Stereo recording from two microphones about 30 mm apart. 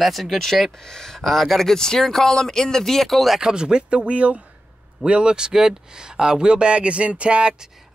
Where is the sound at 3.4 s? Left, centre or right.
Right.